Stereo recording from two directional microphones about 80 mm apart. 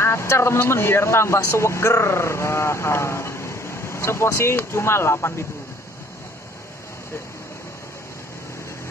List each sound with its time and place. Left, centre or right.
0.0 s speech: left